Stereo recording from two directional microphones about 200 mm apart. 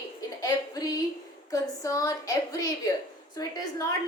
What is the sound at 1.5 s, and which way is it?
A woman's voice, 15° left (ahead or behind).